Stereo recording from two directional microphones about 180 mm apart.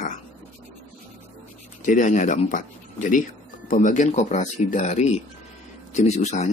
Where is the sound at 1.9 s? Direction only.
45° left (ahead or behind).